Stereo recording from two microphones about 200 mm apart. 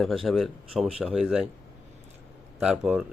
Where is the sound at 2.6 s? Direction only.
5° right (ahead or behind).